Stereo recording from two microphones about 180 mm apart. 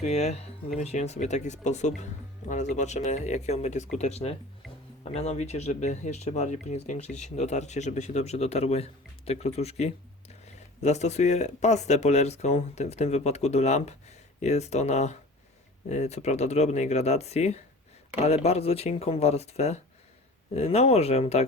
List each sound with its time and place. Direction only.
0.0 s a man's voice: 35° left (ahead or behind)